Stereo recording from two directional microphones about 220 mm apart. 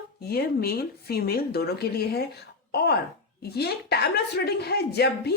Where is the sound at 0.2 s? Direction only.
45° left (ahead or behind).